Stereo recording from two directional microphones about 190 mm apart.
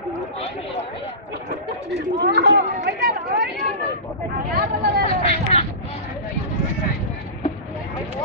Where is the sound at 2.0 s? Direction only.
65° right (ahead or behind).